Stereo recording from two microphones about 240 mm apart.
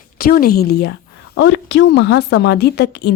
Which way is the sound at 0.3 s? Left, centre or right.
Left.